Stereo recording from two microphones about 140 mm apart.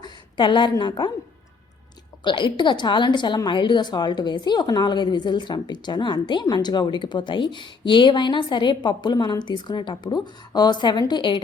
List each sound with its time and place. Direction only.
0.0 s a woman's voice: 35° left (ahead or behind)
2.2 s a woman's voice: 35° left (ahead or behind)